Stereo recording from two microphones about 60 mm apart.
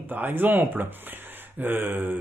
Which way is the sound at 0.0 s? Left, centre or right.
Right.